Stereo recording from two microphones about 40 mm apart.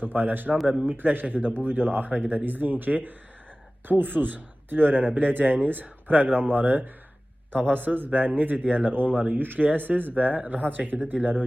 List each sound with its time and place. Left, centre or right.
0.0 s a man's voice: right